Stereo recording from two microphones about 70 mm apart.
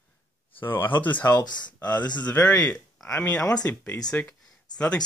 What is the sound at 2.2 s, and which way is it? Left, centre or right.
Speech, centre.